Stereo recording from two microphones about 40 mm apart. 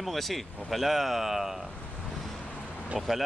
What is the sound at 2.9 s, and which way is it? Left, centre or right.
Speech, centre.